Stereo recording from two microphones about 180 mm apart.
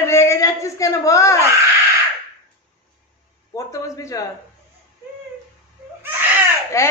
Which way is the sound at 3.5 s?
20° left (ahead or behind).